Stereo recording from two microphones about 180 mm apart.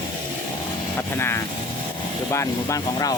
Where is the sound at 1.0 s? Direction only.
15° left (ahead or behind).